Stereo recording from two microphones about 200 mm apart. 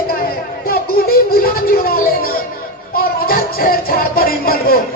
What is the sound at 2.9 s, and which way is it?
Music, 50° left (ahead or behind).